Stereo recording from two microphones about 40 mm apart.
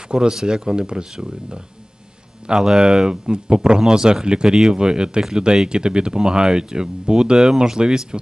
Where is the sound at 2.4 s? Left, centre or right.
Centre.